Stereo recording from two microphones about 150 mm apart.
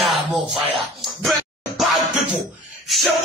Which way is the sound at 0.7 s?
Centre (ahead or behind).